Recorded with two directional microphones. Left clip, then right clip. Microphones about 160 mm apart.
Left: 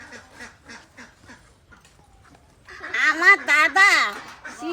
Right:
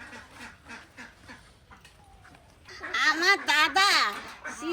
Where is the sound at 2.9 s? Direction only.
60° left (ahead or behind).